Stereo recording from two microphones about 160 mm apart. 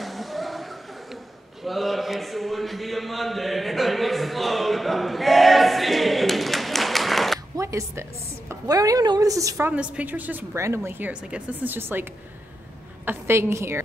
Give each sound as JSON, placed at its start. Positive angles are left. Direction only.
{"t": 0.0, "sound": "a sound", "side_deg": 0}
{"t": 7.5, "sound": "music", "side_deg": -20}
{"t": 8.5, "sound": "a woman's voice", "side_deg": -20}
{"t": 9.7, "sound": "a woman's voice", "side_deg": -10}